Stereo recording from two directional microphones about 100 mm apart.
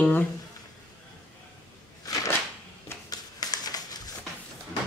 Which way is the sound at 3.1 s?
40° left (ahead or behind).